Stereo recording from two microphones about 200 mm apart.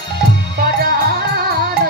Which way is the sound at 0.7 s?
50° right (ahead or behind).